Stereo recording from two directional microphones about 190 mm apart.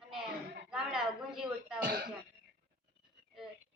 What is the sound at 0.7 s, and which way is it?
Speech, 5° right (ahead or behind).